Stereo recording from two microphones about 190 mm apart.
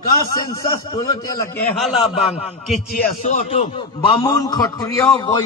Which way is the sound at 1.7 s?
Centre (ahead or behind).